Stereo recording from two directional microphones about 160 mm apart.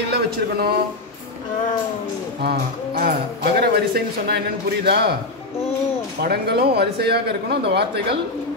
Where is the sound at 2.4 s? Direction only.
75° right (ahead or behind).